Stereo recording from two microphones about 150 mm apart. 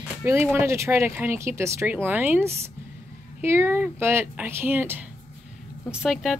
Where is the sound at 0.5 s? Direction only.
20° right (ahead or behind).